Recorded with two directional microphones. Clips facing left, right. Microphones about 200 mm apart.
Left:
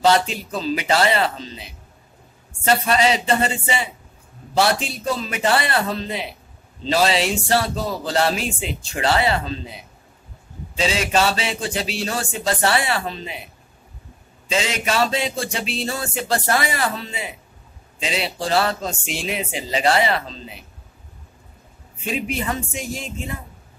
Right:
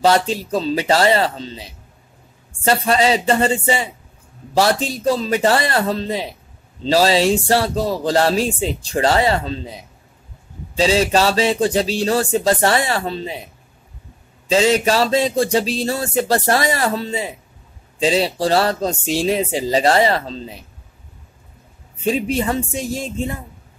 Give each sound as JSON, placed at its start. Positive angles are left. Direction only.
{"t": 0.3, "sound": "speech", "side_deg": -30}
{"t": 10.8, "sound": "speech", "side_deg": -35}
{"t": 14.5, "sound": "speech", "side_deg": -35}
{"t": 22.0, "sound": "speech", "side_deg": -35}